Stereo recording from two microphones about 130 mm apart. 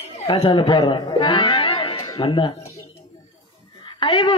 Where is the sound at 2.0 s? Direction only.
25° left (ahead or behind).